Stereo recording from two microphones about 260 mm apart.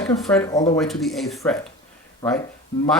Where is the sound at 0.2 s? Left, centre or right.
Centre.